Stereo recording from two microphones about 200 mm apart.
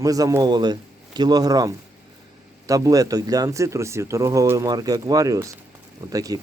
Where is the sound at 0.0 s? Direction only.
15° right (ahead or behind).